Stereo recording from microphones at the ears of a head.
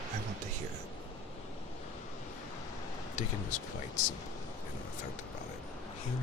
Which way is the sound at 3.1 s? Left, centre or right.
Left.